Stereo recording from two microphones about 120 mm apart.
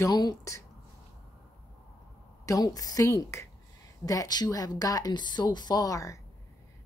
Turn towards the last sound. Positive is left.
turn(degrees=30)  # may be behind; listen again after turning